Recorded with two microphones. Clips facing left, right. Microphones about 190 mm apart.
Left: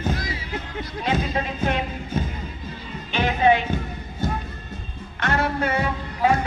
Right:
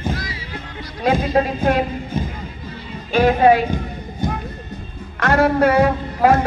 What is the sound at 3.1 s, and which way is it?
Speech, 45° right (ahead or behind).